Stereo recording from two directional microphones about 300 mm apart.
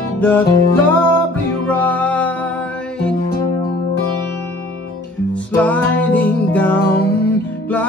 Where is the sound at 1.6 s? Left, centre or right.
Centre.